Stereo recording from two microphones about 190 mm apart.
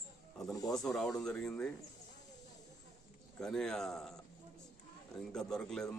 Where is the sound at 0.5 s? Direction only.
20° left (ahead or behind).